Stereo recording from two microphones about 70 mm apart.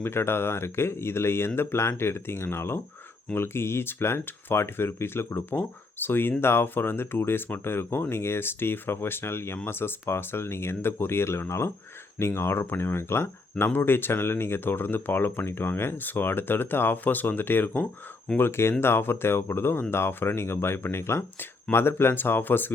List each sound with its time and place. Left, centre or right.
0.0 s speech: left